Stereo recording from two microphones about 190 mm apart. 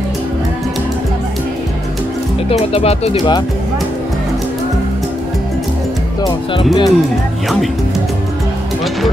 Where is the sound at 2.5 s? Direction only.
30° left (ahead or behind).